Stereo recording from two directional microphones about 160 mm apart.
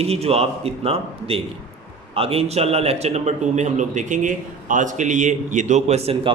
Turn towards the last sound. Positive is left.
turn(degrees=-40)  # may be behind; listen again after turning